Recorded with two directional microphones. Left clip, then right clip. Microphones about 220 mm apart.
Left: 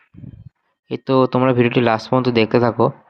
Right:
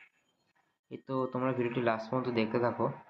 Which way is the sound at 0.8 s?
50° left (ahead or behind).